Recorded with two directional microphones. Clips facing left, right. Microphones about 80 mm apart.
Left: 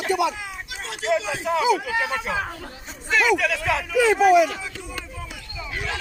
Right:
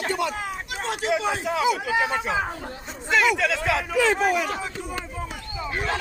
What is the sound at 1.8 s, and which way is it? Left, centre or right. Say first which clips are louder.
Speech: right 2 dB; right.